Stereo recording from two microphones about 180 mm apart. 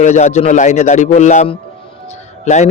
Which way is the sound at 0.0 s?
40° left (ahead or behind).